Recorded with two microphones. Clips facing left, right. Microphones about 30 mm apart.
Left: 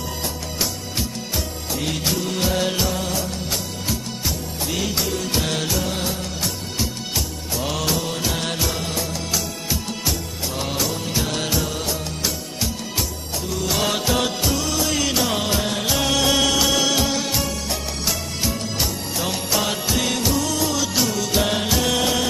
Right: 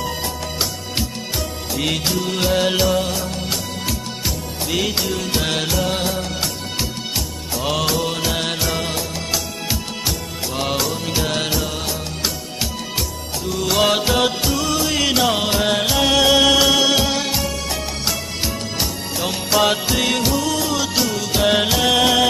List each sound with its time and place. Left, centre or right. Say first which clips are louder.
2.2 s music: right 5 dB; right
5.1 s music: right 2 dB; right
5.6 s music: right 3 dB; right
6.1 s music: right 3 dB; right
7.5 s music: right 3 dB; right
11.1 s music: right 3 dB; right
13.7 s music: right 6 dB; right
13.9 s music: right 4 dB; right
14.8 s music: right 2 dB; right
15.0 s music: right 4 dB; right
15.9 s music: right 4 dB; right
17.1 s music: right 2 dB; right
19.5 s music: right 8 dB; right
21.5 s music: right 5 dB; right